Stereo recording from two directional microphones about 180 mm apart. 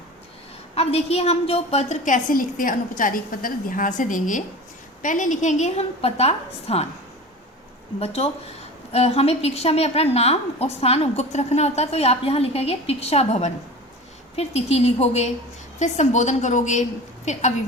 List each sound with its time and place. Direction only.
0.8 s a woman's voice: 35° left (ahead or behind)
7.9 s a woman's voice: 35° left (ahead or behind)